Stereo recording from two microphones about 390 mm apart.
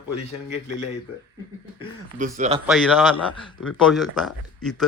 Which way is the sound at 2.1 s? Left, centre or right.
Centre.